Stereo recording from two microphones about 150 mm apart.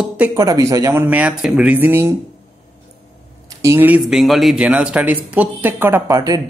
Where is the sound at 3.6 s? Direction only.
15° right (ahead or behind).